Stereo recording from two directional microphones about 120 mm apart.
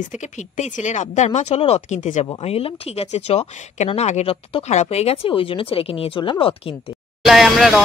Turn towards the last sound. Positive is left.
turn(degrees=0)  # may be behind; listen again after turning